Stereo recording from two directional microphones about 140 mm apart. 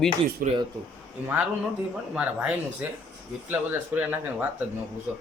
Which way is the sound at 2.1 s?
10° right (ahead or behind).